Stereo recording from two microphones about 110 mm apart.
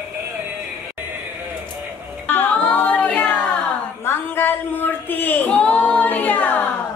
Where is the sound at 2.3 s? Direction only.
15° left (ahead or behind).